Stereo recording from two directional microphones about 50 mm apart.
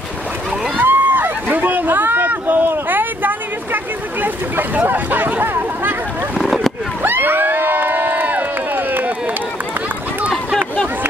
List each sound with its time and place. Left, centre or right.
0.7 s a sound: right
7.0 s crowd: right
10.3 s chatter: centre